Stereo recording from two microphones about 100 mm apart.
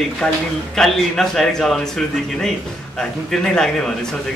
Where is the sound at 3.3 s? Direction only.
5° left (ahead or behind).